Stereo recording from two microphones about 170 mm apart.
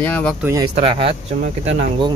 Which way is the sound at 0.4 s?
15° right (ahead or behind).